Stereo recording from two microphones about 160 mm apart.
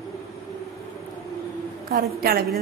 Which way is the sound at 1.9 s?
70° right (ahead or behind).